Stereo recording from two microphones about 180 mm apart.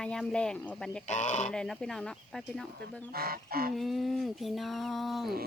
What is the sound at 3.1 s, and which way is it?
Goose, 55° right (ahead or behind).